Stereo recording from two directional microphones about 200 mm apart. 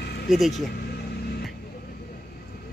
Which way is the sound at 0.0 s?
55° left (ahead or behind).